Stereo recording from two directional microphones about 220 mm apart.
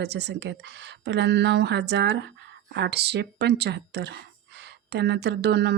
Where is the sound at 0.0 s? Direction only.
50° right (ahead or behind).